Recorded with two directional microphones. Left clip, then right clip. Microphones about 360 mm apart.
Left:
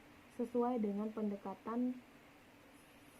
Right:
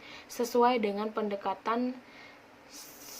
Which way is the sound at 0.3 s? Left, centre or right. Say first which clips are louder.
Right 12 dB; centre.